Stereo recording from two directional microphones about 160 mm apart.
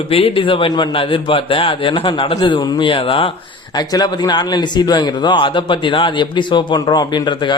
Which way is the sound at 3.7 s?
25° left (ahead or behind).